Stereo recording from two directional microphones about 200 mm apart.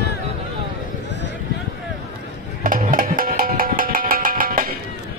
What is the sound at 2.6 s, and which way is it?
Music, 45° right (ahead or behind).